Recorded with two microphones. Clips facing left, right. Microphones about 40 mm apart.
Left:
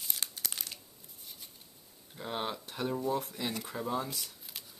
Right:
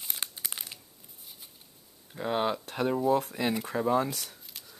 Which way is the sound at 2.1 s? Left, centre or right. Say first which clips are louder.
Right 8 dB; right.